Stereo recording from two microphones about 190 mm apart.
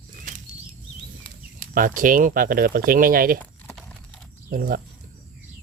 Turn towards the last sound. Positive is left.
turn(degrees=-50)  # may be behind; listen again after turning